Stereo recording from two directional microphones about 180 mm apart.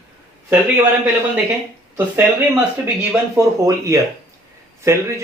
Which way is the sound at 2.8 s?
10° right (ahead or behind).